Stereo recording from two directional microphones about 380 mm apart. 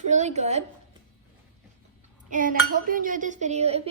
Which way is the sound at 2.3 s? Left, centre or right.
Right.